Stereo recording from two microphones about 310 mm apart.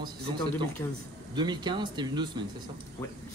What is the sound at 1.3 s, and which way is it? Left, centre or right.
A man's voice, centre.